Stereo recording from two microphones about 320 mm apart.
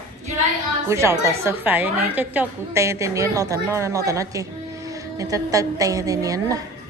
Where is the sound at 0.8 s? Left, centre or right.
Centre.